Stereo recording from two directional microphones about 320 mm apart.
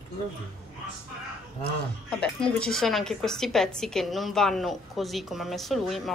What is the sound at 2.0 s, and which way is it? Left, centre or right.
A woman's voice, centre.